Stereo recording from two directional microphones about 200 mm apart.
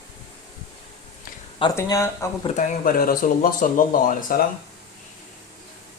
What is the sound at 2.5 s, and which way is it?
Speech, 45° left (ahead or behind).